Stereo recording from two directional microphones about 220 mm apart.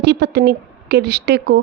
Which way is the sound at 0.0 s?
50° right (ahead or behind).